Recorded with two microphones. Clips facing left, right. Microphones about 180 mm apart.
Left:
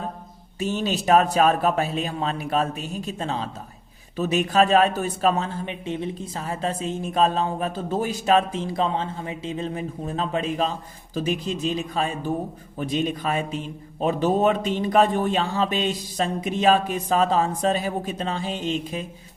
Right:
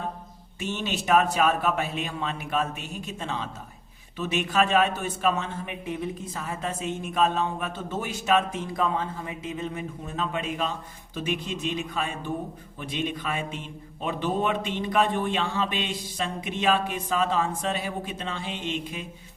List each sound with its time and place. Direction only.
0.6 s speech: 35° left (ahead or behind)